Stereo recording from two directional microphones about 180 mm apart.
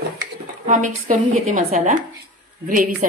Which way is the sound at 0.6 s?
45° right (ahead or behind).